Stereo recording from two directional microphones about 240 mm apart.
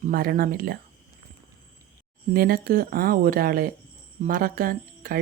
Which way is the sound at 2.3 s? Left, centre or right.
Right.